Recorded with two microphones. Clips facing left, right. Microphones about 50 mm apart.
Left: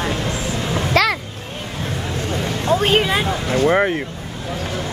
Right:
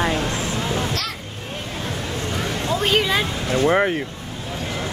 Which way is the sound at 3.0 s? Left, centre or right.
Centre.